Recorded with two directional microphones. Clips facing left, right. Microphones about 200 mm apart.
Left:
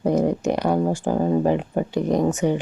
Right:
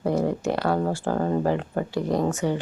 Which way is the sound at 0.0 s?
20° left (ahead or behind).